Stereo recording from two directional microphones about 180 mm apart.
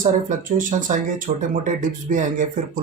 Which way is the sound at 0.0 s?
45° right (ahead or behind).